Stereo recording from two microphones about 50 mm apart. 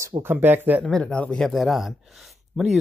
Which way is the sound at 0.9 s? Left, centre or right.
Centre.